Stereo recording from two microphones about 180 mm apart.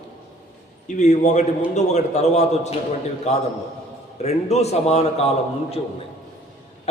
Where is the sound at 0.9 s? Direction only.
40° left (ahead or behind).